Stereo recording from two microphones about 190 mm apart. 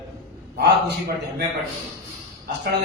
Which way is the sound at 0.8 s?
60° right (ahead or behind).